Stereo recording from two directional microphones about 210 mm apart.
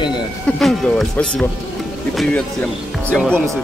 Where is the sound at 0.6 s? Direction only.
Centre (ahead or behind).